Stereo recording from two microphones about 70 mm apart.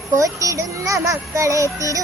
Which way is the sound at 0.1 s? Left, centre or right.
Right.